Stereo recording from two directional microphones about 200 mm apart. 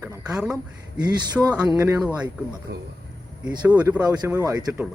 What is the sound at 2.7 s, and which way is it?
Speech, 50° right (ahead or behind).